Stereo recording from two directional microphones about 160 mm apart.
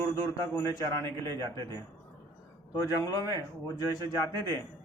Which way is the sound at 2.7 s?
25° left (ahead or behind).